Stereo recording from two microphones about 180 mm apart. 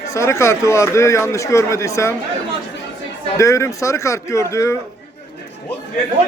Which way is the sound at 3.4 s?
15° left (ahead or behind).